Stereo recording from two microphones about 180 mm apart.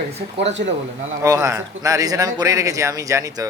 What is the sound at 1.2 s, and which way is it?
Speech, 20° right (ahead or behind).